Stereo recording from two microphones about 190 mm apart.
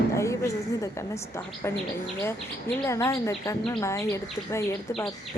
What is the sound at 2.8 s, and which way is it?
Speech, 15° left (ahead or behind).